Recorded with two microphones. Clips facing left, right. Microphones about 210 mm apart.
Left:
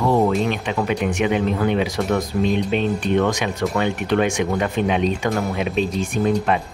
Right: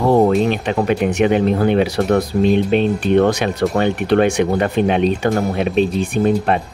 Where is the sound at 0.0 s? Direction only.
35° right (ahead or behind).